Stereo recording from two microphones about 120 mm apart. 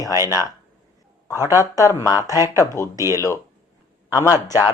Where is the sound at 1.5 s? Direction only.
25° left (ahead or behind).